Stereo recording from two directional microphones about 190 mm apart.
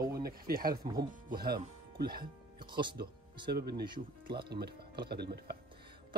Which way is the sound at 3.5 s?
55° right (ahead or behind).